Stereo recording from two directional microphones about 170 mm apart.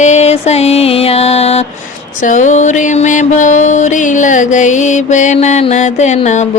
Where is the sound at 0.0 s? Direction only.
40° left (ahead or behind).